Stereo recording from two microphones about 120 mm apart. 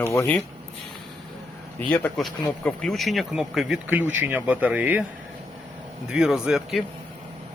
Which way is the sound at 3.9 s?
15° right (ahead or behind).